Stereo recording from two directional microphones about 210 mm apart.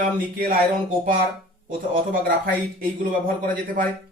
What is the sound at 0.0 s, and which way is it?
Speech, 45° right (ahead or behind).